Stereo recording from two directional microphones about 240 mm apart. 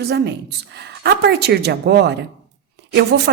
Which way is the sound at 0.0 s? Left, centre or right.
Right.